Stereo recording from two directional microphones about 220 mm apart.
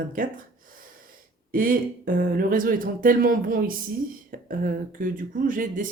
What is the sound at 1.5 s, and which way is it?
Speech, 40° right (ahead or behind).